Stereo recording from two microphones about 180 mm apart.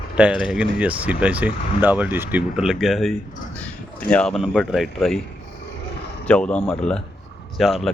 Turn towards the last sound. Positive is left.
turn(degrees=0)  # may be behind; listen again after turning